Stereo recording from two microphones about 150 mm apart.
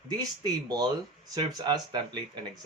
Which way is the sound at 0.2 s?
25° right (ahead or behind).